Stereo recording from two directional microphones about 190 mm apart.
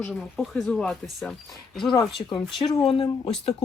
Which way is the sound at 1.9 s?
25° left (ahead or behind).